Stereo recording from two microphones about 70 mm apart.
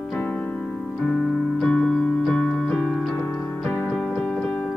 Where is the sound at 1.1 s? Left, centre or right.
Centre.